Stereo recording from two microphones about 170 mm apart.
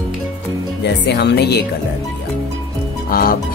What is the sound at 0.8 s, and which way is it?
Speech, 85° left.